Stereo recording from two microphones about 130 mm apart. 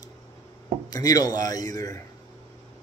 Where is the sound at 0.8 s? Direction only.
30° left (ahead or behind).